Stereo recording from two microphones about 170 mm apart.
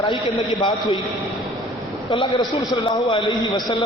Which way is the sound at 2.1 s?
30° left (ahead or behind).